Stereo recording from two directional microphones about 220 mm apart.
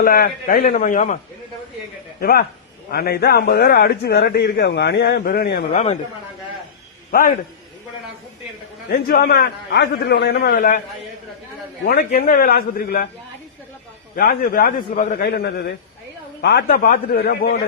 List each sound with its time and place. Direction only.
0.0 s a man's voice: 40° left (ahead or behind)
2.2 s a man's voice: 45° left (ahead or behind)
5.7 s a man's voice: 30° left (ahead or behind)
7.1 s a man's voice: 40° left (ahead or behind)
8.9 s a man's voice: 45° left (ahead or behind)
11.9 s a man's voice: 45° left (ahead or behind)
14.2 s a man's voice: 40° left (ahead or behind)